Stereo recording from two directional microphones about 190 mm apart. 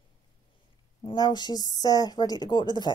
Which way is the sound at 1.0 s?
20° left (ahead or behind).